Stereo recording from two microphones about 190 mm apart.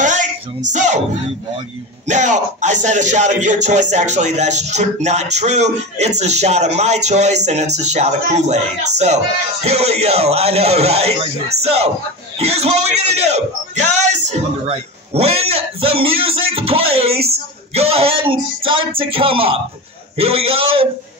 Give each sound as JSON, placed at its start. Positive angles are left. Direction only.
{"t": 0.0, "sound": "a sound", "side_deg": -40}
{"t": 0.7, "sound": "speech", "side_deg": -40}
{"t": 2.0, "sound": "a man's voice", "side_deg": -40}